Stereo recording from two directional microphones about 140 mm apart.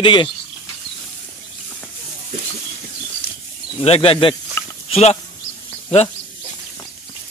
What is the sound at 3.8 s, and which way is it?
Speech, 45° left (ahead or behind).